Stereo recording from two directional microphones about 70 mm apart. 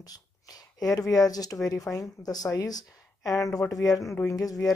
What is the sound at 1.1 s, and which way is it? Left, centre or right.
Speech, left.